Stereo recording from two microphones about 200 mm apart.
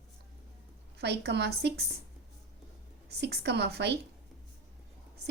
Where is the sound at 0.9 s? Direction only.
55° right (ahead or behind).